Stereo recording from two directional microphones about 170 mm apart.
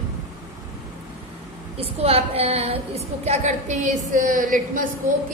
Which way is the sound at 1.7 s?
35° right (ahead or behind).